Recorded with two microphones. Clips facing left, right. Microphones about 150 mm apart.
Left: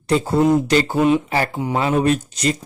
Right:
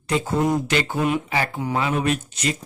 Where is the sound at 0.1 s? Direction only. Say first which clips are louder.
Left 5 dB; 35° left (ahead or behind).